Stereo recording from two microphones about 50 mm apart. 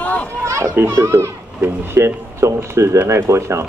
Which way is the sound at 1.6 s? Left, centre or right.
Right.